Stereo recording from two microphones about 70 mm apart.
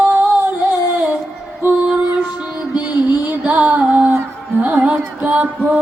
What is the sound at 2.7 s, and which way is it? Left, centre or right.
Music, centre.